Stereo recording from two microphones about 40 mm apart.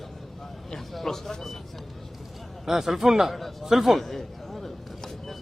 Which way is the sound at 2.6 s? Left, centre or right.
Centre.